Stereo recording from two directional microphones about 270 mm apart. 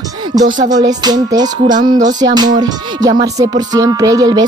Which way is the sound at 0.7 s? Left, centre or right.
Centre.